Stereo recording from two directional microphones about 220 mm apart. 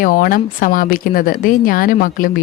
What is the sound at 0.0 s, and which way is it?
A woman's voice, 40° left (ahead or behind).